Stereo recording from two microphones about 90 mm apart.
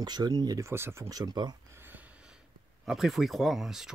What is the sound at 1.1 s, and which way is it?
Speech, 50° right (ahead or behind).